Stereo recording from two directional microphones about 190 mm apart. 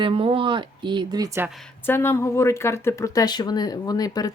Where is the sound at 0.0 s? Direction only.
30° right (ahead or behind).